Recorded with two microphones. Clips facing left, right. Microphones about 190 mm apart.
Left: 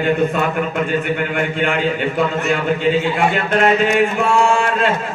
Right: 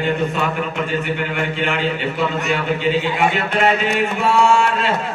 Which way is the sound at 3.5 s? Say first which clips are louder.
Left 3 dB; 45° left (ahead or behind).